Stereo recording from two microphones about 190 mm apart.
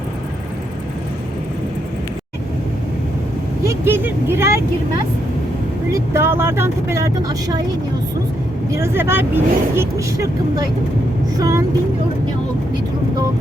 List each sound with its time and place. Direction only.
3.7 s speech: 10° right (ahead or behind)
5.9 s speech: 15° right (ahead or behind)
8.7 s speech: 15° right (ahead or behind)